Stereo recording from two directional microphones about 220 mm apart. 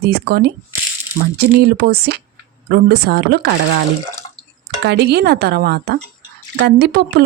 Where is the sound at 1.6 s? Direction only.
45° right (ahead or behind).